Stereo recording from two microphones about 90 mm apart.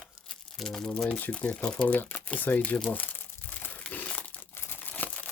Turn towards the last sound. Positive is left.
turn(degrees=20)  # may be behind; listen again after turning